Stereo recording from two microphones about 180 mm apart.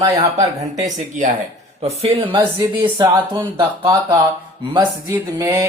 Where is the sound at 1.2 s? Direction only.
45° right (ahead or behind); by 4.2 s 20° right (ahead or behind).